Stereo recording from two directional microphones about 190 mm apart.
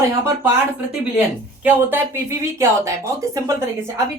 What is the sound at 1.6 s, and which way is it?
Speech, 10° right (ahead or behind).